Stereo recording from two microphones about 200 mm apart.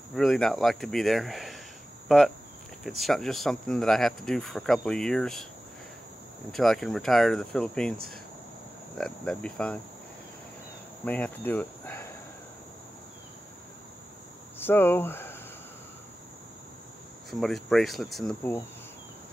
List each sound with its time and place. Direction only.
0.1 s speech: centre (ahead or behind)
6.5 s speech: centre (ahead or behind)
11.1 s cricket: 10° left (ahead or behind)
14.6 s speech: 10° left (ahead or behind)
17.3 s speech: centre (ahead or behind)